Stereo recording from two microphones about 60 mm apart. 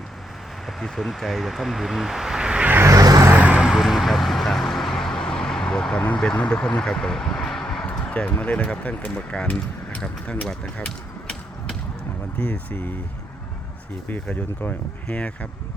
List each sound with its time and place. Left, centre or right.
0.8 s speech: centre
2.8 s vehicle: right
3.3 s vehicle: right
3.7 s vehicle: centre
6.3 s speech: centre
15.1 s speech: left